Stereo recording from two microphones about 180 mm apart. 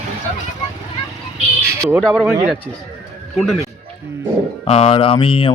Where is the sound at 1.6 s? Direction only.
15° right (ahead or behind).